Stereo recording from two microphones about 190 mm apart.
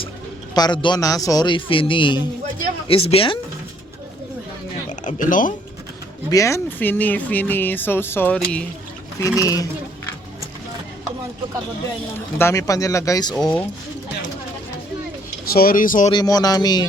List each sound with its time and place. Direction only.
0.5 s a man's voice: 20° left (ahead or behind)
4.9 s speech: 40° left (ahead or behind)
6.3 s speech: 15° left (ahead or behind)
9.2 s speech: 15° left (ahead or behind)
12.4 s speech: 15° left (ahead or behind)
13.3 s speech: 5° left (ahead or behind)
15.5 s speech: 50° left (ahead or behind)
16.1 s a man's voice: 20° left (ahead or behind)